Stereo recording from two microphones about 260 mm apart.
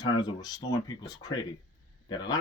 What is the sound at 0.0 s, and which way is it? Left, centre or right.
A man's voice, centre.